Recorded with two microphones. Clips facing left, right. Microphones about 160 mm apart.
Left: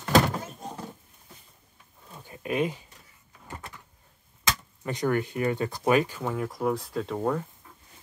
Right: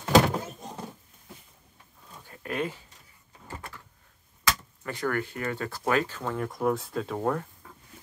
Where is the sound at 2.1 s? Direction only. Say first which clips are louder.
Left 4 dB; 15° left (ahead or behind).